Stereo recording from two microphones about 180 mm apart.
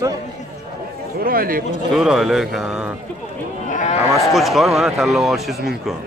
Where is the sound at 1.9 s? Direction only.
Centre (ahead or behind).